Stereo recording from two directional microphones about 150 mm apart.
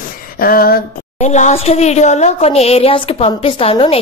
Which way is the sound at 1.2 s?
55° left (ahead or behind).